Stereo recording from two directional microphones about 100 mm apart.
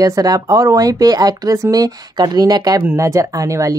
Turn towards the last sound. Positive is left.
turn(degrees=-30)  # may be behind; listen again after turning